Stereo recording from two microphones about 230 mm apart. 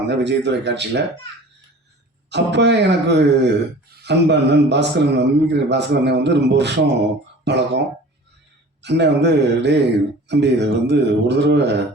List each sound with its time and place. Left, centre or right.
0.1 s a man's voice: right
2.3 s a man's voice: right
8.8 s a man's voice: right